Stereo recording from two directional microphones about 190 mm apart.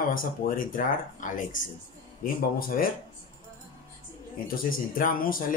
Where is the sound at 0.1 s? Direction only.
50° left (ahead or behind).